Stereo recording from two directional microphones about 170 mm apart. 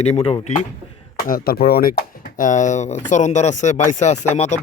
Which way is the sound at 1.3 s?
60° left (ahead or behind).